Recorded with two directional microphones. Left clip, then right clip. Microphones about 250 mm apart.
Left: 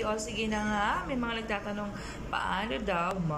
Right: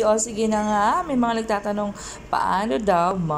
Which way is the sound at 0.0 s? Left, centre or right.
Centre.